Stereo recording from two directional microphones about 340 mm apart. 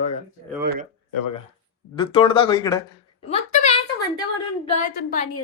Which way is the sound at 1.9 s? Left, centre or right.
Centre.